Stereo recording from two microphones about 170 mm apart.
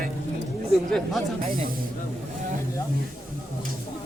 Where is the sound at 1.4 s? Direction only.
55° right (ahead or behind).